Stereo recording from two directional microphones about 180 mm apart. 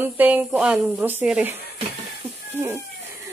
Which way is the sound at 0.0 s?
10° right (ahead or behind).